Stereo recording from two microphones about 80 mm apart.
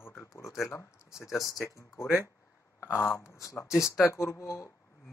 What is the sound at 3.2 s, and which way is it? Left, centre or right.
Speech, left.